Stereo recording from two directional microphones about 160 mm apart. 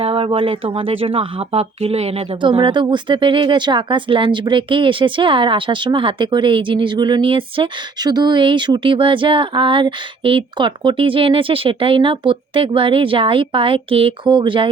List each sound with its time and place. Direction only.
0.0 s speech: 35° right (ahead or behind)